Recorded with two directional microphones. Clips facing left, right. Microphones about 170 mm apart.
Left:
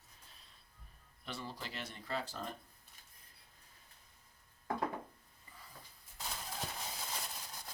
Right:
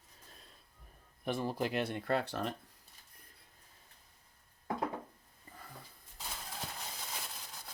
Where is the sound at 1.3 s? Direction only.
50° right (ahead or behind); by 2.5 s 70° right (ahead or behind).